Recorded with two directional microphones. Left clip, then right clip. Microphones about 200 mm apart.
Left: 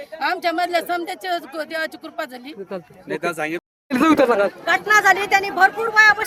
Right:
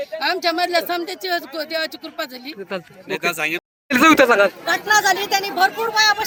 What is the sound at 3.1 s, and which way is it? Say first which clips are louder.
Speech: right 2 dB; 55° left (ahead or behind).